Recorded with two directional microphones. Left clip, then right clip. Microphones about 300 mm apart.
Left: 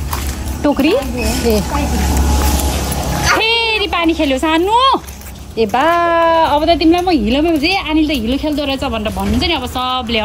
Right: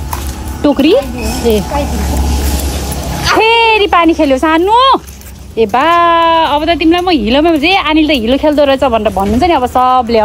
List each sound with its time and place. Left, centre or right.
0.6 s speech: right
1.5 s speech: centre
3.2 s a woman's voice: centre